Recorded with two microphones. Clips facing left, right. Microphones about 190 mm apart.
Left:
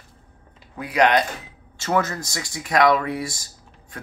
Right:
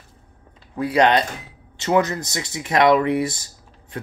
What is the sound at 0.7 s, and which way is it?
Speech, 30° right (ahead or behind).